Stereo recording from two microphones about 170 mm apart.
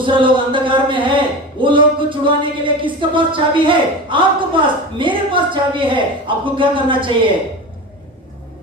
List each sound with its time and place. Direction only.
0.0 s speech: 30° right (ahead or behind)